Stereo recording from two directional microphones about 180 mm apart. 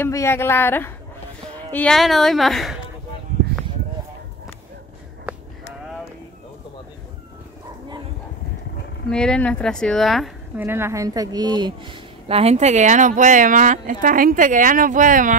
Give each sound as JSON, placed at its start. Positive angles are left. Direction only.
{"t": 0.0, "sound": "a woman's voice", "side_deg": 15}
{"t": 5.3, "sound": "a sound", "side_deg": -10}
{"t": 9.1, "sound": "speech", "side_deg": 5}
{"t": 10.6, "sound": "a woman's voice", "side_deg": -15}